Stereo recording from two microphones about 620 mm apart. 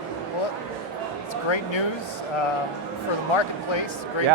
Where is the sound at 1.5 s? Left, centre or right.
Left.